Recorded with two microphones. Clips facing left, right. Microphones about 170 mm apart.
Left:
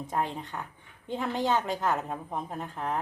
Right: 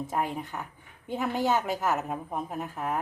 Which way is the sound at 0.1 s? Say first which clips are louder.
Left 3 dB; 10° right (ahead or behind).